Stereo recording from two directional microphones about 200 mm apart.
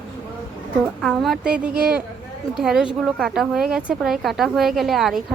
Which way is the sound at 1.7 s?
50° right (ahead or behind).